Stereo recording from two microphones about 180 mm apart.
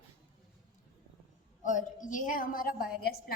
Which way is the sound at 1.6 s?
45° left (ahead or behind).